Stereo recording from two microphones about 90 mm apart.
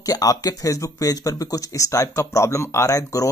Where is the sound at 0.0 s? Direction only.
40° left (ahead or behind).